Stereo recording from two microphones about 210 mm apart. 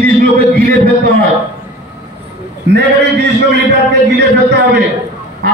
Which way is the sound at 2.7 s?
55° right (ahead or behind).